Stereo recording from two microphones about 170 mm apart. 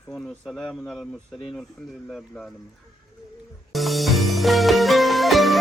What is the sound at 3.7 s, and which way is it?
Music, centre (ahead or behind).